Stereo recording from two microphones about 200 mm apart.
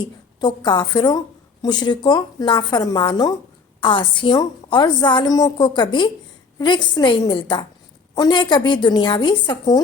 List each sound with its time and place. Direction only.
0.3 s a woman's voice: 20° left (ahead or behind)